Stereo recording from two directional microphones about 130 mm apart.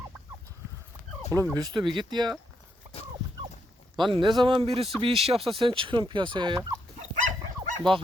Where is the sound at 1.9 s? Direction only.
35° right (ahead or behind).